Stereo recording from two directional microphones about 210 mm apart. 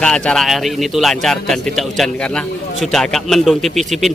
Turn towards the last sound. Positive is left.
turn(degrees=0)  # may be behind; listen again after turning